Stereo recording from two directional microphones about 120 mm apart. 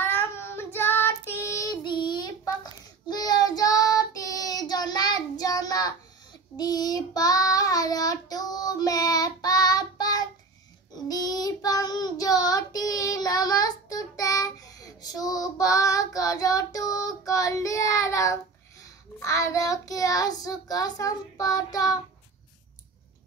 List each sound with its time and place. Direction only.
0.0 s child singing: 20° left (ahead or behind)
1.8 s child singing: 35° left (ahead or behind)